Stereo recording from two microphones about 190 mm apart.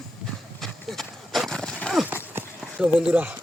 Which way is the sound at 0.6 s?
Centre (ahead or behind).